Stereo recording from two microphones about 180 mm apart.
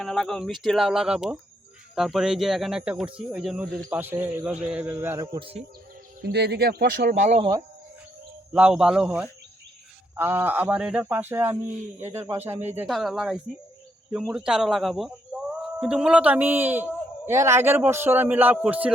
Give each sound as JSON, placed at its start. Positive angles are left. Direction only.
{"t": 0.0, "sound": "a man's voice", "side_deg": 0}
{"t": 6.2, "sound": "speech", "side_deg": -65}
{"t": 7.2, "sound": "speech", "side_deg": -40}
{"t": 8.5, "sound": "a man's voice", "side_deg": -5}
{"t": 12.9, "sound": "speech", "side_deg": 0}